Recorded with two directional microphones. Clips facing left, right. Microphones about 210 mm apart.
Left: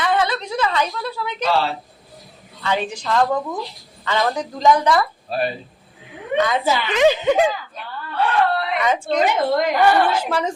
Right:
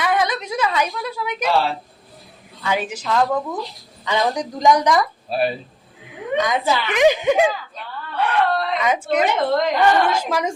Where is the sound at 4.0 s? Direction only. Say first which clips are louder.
Even; 15° right (ahead or behind).